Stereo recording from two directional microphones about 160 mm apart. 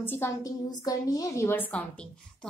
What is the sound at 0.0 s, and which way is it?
A woman's voice, 15° left (ahead or behind).